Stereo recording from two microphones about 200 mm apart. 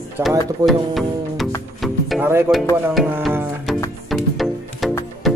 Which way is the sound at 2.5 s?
10° right (ahead or behind).